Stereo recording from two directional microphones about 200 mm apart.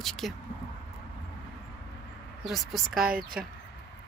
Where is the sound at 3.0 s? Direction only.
45° right (ahead or behind).